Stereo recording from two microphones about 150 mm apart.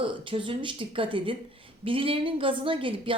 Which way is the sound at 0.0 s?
35° right (ahead or behind).